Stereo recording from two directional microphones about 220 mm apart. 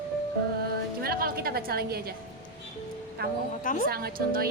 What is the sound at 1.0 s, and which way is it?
Speech, 45° right (ahead or behind).